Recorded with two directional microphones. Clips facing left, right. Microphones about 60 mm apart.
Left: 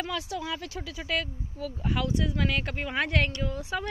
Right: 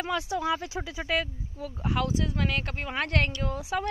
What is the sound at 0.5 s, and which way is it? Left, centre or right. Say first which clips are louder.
Speech: right 5 dB; centre.